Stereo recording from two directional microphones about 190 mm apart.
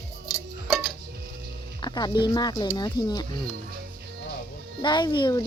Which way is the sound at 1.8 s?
20° left (ahead or behind).